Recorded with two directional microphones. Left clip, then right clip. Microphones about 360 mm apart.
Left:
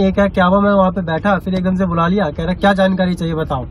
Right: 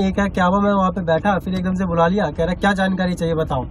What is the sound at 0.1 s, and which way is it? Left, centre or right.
Speech, centre.